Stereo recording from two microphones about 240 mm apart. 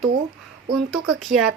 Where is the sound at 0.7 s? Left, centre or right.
Centre.